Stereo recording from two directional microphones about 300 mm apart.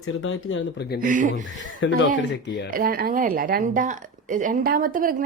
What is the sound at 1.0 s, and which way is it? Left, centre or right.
Speech, right.